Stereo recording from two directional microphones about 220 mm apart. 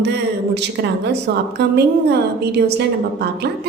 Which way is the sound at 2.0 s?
50° right (ahead or behind).